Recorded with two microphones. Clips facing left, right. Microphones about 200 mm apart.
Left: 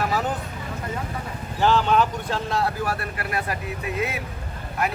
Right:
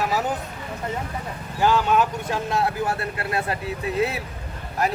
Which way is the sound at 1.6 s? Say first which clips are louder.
Even; 10° right (ahead or behind).